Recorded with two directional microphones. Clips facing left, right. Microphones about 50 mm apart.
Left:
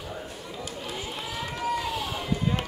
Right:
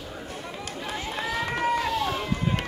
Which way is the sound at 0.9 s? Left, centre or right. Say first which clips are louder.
Right 8 dB; right.